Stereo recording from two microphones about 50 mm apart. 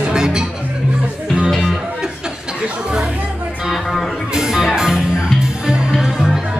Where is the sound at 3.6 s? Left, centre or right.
Centre.